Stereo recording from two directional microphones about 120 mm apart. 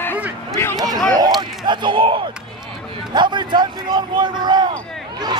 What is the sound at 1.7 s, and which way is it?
Speech, 40° right (ahead or behind).